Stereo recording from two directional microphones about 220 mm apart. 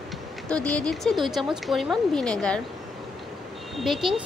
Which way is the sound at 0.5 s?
5° left (ahead or behind).